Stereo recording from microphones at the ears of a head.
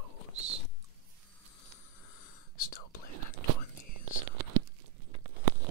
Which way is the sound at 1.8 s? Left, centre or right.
Left.